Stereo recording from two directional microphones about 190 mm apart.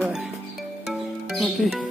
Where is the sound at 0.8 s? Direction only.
Centre (ahead or behind).